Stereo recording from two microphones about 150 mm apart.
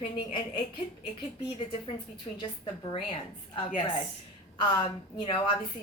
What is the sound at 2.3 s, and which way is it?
Speech, 30° left (ahead or behind).